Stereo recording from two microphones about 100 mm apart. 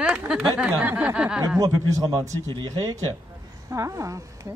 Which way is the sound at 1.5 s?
35° right (ahead or behind).